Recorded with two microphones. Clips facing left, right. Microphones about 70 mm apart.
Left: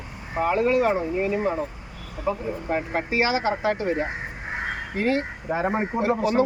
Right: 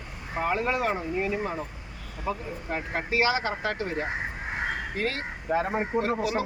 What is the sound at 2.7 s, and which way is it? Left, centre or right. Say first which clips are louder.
Speech: left 4 dB; centre.